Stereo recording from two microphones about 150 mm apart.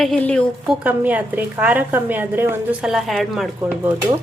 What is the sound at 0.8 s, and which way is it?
A woman's voice, 10° right (ahead or behind).